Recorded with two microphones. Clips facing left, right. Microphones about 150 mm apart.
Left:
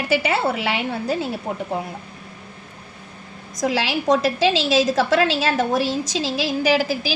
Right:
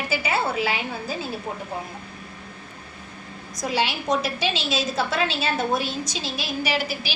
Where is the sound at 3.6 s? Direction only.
90° left.